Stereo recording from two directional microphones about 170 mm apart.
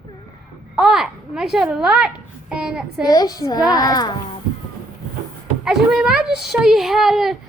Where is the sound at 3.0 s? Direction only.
25° left (ahead or behind).